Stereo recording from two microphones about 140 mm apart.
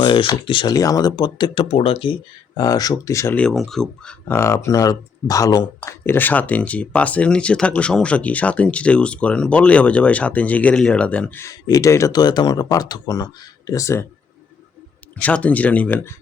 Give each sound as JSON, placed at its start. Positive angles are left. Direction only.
{"t": 0.0, "sound": "speech", "side_deg": 35}
{"t": 1.6, "sound": "speech", "side_deg": 45}
{"t": 2.6, "sound": "speech", "side_deg": 25}
{"t": 3.3, "sound": "speech", "side_deg": 5}
{"t": 4.4, "sound": "speech", "side_deg": 20}
{"t": 11.4, "sound": "speech", "side_deg": 25}
{"t": 15.2, "sound": "speech", "side_deg": 10}